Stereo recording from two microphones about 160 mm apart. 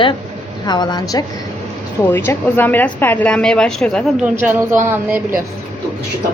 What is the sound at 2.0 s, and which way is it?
A woman's voice, 15° left (ahead or behind).